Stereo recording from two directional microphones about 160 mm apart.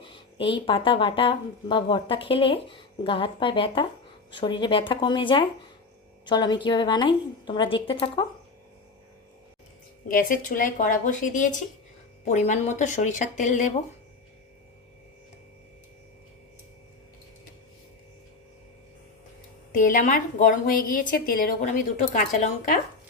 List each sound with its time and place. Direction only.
0.1 s a woman's voice: 35° left (ahead or behind)
10.1 s a woman's voice: 60° left (ahead or behind)
19.7 s a woman's voice: 55° left (ahead or behind)
22.1 s speech: 55° left (ahead or behind)